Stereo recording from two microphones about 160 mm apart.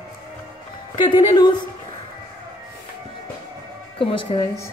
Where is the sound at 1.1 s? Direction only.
30° left (ahead or behind).